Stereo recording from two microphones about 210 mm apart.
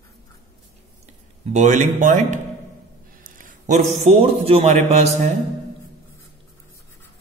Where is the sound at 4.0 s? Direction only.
30° right (ahead or behind).